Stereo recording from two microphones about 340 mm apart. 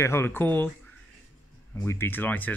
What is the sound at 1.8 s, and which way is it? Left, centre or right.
Speech, centre.